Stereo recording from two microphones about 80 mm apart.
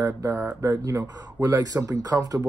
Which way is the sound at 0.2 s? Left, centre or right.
Right.